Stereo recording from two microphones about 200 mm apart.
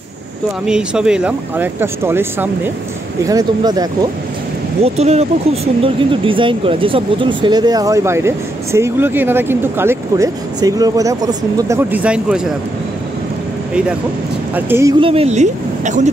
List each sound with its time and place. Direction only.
0.7 s speech: 5° right (ahead or behind); by 4.1 s 20° right (ahead or behind)
4.8 s speech: 30° right (ahead or behind); by 12.4 s 5° right (ahead or behind)
14.5 s speech: 10° right (ahead or behind)
15.0 s speech: 30° right (ahead or behind)